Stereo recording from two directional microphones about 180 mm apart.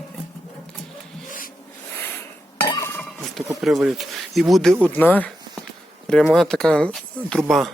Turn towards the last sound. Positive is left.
turn(degrees=5)  # may be behind; listen again after turning